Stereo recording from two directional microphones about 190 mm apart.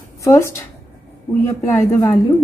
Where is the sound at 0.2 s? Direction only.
15° left (ahead or behind).